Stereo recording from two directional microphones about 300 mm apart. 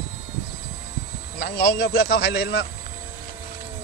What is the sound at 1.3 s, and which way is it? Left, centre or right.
Speech, left.